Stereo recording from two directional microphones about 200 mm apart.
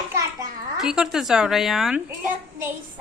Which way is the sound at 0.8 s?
5° right (ahead or behind).